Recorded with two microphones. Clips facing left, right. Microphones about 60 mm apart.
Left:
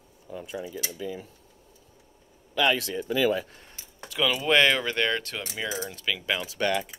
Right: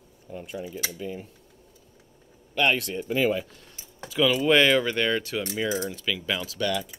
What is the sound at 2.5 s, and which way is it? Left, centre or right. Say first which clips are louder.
Speech: right 1 dB; left.